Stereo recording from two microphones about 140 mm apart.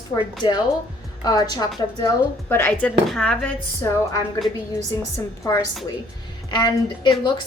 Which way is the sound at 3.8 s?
20° left (ahead or behind).